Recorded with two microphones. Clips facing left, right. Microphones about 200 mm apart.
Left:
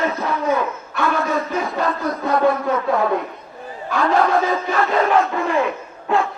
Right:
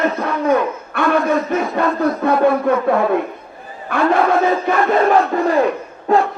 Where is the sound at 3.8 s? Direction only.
55° right (ahead or behind).